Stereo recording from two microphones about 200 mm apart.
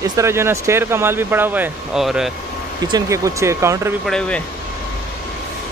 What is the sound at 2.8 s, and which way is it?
A man's voice, 15° right (ahead or behind).